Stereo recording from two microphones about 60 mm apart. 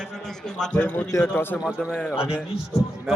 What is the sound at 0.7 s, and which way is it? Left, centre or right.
Speech, left.